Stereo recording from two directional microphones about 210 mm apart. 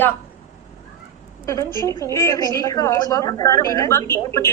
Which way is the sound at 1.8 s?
15° left (ahead or behind).